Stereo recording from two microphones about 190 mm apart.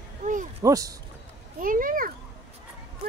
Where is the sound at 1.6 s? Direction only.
45° right (ahead or behind).